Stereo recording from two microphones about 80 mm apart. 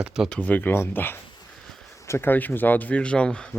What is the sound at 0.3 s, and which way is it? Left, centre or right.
Speech, centre.